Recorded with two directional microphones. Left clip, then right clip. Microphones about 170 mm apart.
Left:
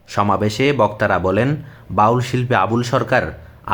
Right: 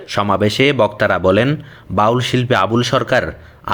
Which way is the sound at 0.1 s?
20° right (ahead or behind).